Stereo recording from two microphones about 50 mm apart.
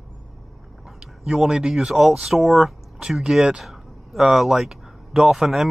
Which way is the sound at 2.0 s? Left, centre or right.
Centre.